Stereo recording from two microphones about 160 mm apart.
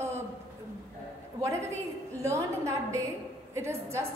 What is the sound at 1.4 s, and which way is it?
A woman's voice, 20° right (ahead or behind).